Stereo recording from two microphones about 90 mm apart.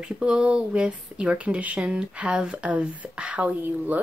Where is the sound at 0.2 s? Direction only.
10° right (ahead or behind).